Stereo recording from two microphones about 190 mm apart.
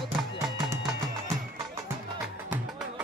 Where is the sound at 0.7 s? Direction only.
15° right (ahead or behind).